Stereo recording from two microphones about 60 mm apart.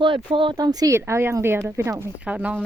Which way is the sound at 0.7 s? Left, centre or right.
Right.